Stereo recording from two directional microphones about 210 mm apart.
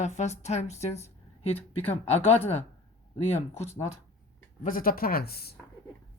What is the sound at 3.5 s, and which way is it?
Speech, 30° left (ahead or behind).